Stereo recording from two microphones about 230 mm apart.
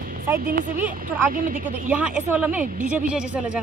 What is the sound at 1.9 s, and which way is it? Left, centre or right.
Speech, centre.